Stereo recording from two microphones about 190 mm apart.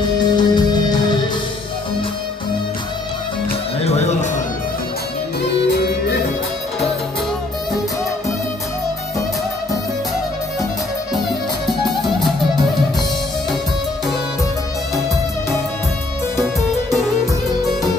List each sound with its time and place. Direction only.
0.2 s music: 20° left (ahead or behind)
3.8 s music: 35° left (ahead or behind)
11.6 s music: centre (ahead or behind)